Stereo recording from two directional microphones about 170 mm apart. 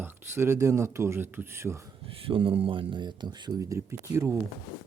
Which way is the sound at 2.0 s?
30° right (ahead or behind).